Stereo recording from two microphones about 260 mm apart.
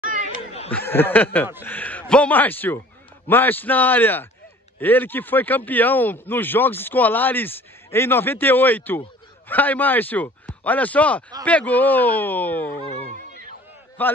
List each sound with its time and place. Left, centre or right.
0.4 s a sound: left
0.7 s speech: centre
14.0 s speech: centre